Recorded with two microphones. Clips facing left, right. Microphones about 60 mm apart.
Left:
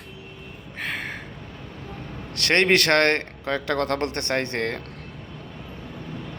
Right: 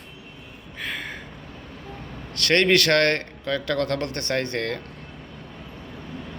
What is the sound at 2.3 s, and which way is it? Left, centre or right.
A man's voice, left.